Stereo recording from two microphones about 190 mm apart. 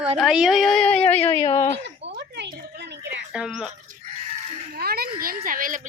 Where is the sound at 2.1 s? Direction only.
60° right (ahead or behind).